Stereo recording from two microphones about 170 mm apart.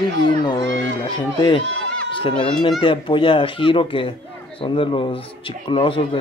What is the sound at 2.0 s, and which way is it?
Speech, 30° left (ahead or behind).